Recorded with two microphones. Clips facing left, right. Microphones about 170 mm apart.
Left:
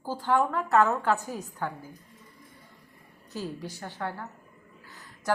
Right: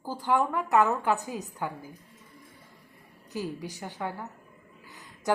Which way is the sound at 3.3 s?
15° right (ahead or behind).